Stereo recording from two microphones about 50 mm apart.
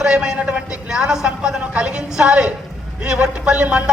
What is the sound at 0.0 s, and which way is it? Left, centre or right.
A woman's voice, centre.